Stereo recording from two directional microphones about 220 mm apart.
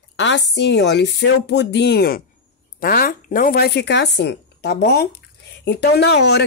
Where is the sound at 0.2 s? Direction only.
55° left (ahead or behind).